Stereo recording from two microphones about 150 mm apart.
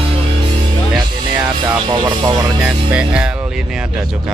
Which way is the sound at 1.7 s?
25° right (ahead or behind).